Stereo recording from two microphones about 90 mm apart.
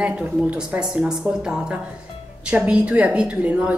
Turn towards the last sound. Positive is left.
turn(degrees=-10)  # may be behind; listen again after turning